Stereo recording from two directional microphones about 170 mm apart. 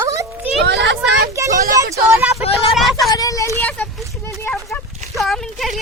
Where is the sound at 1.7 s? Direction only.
20° right (ahead or behind).